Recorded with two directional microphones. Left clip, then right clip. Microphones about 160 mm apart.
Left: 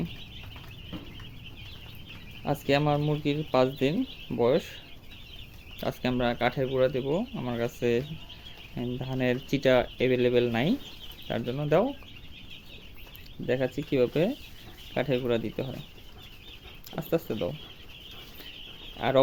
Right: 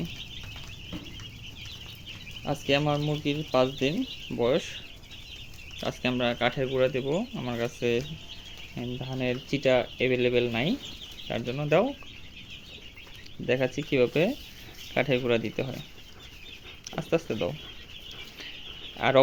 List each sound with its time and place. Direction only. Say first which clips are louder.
2.4 s speech: even; 10° left (ahead or behind)
5.8 s speech: even; 15° left (ahead or behind)
13.9 s speech: right 1 dB; 5° left (ahead or behind)
17.2 s speech: right 1 dB; centre (ahead or behind)
18.9 s speech: right 2 dB; 5° left (ahead or behind)